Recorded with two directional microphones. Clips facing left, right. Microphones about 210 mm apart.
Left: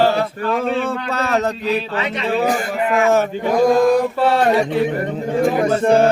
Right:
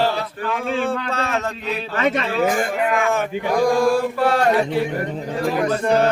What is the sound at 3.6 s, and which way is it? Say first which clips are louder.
Speech: left 4 dB; 20° left (ahead or behind).